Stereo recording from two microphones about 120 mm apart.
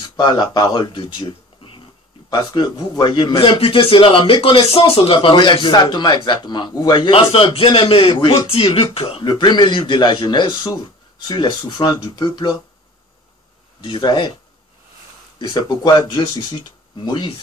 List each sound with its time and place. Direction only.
0.2 s a man's voice: 40° left (ahead or behind)
9.3 s speech: 35° left (ahead or behind)
13.7 s speech: 40° left (ahead or behind)
15.3 s speech: 40° left (ahead or behind)